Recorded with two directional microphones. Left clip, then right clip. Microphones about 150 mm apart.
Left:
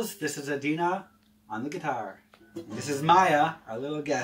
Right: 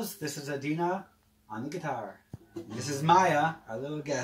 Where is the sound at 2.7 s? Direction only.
Centre (ahead or behind).